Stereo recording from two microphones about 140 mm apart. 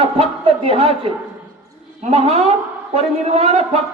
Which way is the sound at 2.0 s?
50° right (ahead or behind).